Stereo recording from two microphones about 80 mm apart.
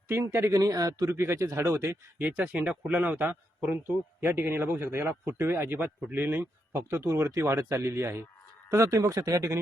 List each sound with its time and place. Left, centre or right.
0.1 s speech: right
1.1 s speech: right
2.1 s a man's voice: right